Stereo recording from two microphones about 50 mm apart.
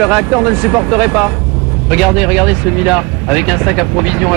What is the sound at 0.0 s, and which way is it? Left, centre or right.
Speech, centre.